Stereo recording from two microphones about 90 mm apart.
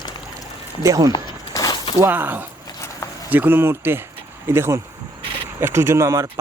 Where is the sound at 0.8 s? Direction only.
40° right (ahead or behind).